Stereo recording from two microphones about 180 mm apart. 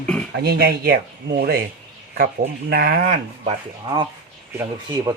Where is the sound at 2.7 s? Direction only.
55° right (ahead or behind).